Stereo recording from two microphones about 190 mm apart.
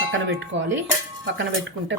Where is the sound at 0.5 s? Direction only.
80° right.